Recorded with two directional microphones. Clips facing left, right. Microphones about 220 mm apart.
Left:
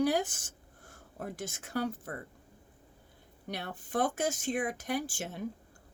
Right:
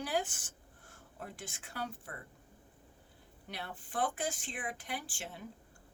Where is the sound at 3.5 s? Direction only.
45° left (ahead or behind).